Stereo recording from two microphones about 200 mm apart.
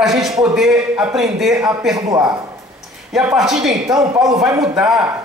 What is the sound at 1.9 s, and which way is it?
Speech, 20° right (ahead or behind).